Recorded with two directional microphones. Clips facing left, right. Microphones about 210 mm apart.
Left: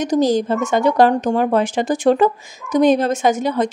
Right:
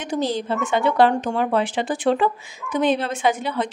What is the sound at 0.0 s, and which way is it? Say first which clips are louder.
Speech: left 8 dB; 40° left (ahead or behind).